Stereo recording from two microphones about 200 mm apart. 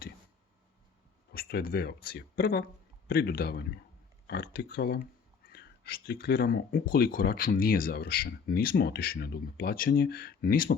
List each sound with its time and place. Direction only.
1.3 s speech: 50° left (ahead or behind)